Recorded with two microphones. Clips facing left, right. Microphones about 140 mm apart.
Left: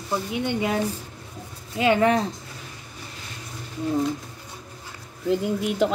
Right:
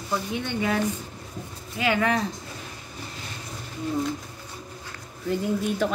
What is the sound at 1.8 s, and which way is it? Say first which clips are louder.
Speech: left 4 dB; 25° left (ahead or behind).